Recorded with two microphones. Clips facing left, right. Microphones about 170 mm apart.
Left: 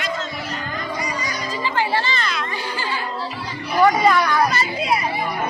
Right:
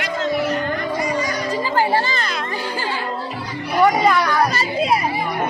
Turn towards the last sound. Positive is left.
turn(degrees=-40)  # may be behind; listen again after turning